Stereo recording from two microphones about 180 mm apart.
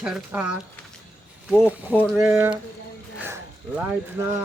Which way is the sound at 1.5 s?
10° right (ahead or behind).